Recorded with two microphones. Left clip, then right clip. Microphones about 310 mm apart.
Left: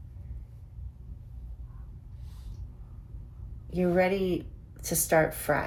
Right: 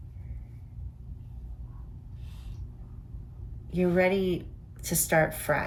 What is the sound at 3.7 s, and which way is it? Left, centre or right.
Speech, centre.